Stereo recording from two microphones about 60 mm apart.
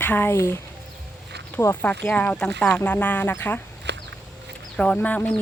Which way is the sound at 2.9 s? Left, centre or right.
Left.